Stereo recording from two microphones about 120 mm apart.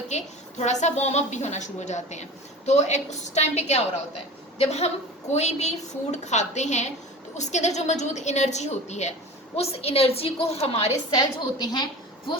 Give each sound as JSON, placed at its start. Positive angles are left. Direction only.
{"t": 0.1, "sound": "a woman's voice", "side_deg": 70}
{"t": 9.6, "sound": "a woman's voice", "side_deg": 55}
{"t": 11.1, "sound": "a woman's voice", "side_deg": 35}